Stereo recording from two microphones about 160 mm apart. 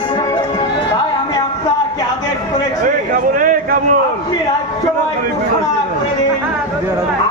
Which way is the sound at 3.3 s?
60° right (ahead or behind).